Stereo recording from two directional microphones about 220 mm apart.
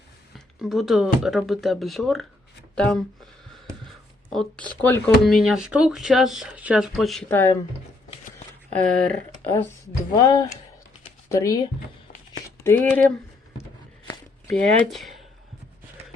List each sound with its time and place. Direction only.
0.3 s speech: centre (ahead or behind)
4.3 s speech: 5° left (ahead or behind)
9.0 s speech: 10° left (ahead or behind)
12.6 s speech: 10° left (ahead or behind)
14.5 s speech: centre (ahead or behind)